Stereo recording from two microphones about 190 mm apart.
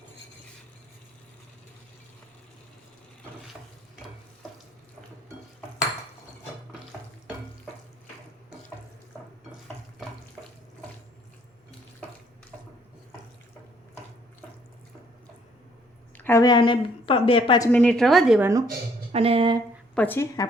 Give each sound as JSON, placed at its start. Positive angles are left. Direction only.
{"t": 16.1, "sound": "speech", "side_deg": 10}
{"t": 17.7, "sound": "a woman's voice", "side_deg": 5}
{"t": 18.3, "sound": "speech", "side_deg": -15}
{"t": 19.1, "sound": "speech", "side_deg": -30}
{"t": 20.0, "sound": "speech", "side_deg": 10}